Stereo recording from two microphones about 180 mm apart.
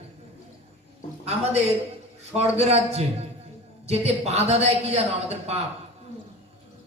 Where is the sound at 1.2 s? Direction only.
35° right (ahead or behind).